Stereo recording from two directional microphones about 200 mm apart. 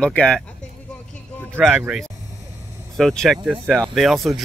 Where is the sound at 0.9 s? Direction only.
5° left (ahead or behind).